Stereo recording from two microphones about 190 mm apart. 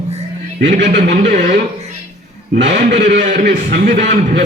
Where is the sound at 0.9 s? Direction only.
60° right (ahead or behind).